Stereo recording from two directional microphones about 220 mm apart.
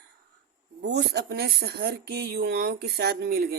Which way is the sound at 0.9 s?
45° right (ahead or behind).